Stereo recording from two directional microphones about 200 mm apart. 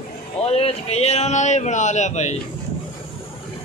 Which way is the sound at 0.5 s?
30° left (ahead or behind).